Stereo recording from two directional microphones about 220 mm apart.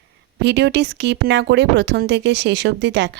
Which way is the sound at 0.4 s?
50° right (ahead or behind).